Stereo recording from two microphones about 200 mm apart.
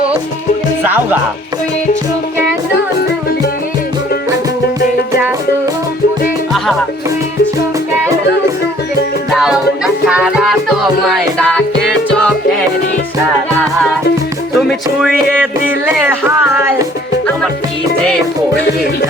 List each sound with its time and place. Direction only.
0.9 s speech: 10° right (ahead or behind)
2.7 s music: 55° left (ahead or behind)
9.3 s music: centre (ahead or behind)
14.5 s music: centre (ahead or behind)
16.0 s speech: 10° right (ahead or behind)